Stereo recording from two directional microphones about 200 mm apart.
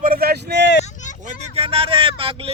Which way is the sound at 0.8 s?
35° left (ahead or behind).